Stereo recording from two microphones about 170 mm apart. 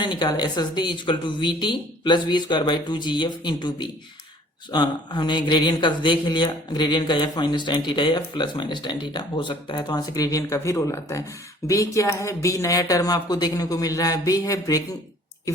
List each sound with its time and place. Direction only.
0.0 s speech: 25° left (ahead or behind)